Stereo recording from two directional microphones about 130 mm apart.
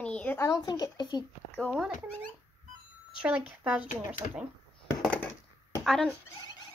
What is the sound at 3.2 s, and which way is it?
Speech, 10° right (ahead or behind).